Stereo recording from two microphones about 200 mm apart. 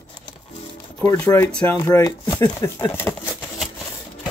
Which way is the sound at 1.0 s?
15° left (ahead or behind).